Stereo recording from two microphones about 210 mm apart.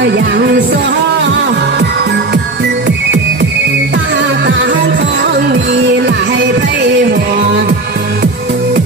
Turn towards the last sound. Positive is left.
turn(degrees=-55)  # may be behind; listen again after turning